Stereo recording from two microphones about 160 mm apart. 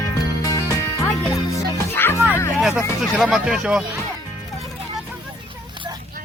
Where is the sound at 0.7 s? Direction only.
20° left (ahead or behind).